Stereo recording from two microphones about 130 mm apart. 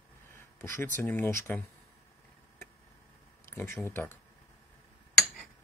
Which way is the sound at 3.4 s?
20° left (ahead or behind).